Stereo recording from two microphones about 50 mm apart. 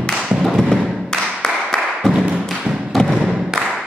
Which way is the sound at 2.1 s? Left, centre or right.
Centre.